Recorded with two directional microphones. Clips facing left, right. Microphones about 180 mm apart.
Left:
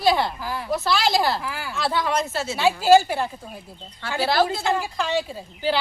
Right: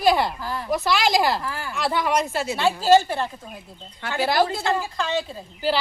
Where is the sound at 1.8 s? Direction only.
5° right (ahead or behind).